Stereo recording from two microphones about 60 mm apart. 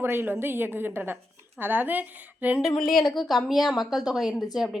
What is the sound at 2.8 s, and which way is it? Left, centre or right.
A woman's voice, centre.